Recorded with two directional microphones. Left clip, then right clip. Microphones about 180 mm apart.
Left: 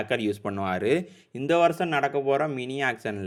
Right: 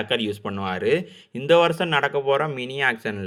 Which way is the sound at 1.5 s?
25° left (ahead or behind).